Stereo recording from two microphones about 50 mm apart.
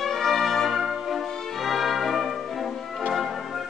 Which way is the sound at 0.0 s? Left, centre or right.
Centre.